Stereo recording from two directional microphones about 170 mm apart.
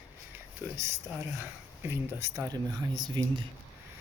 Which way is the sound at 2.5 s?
25° right (ahead or behind).